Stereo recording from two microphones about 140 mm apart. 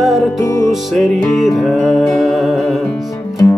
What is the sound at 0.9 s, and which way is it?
Music, centre (ahead or behind).